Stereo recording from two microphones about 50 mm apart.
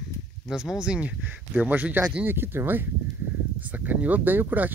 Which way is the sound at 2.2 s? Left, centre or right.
Right.